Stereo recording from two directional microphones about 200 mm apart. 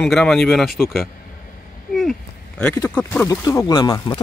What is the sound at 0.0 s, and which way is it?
Speech, 5° left (ahead or behind).